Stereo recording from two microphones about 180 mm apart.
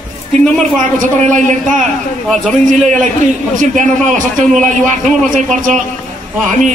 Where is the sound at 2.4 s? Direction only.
5° left (ahead or behind).